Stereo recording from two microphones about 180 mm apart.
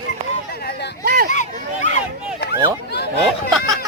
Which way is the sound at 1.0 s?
60° right (ahead or behind).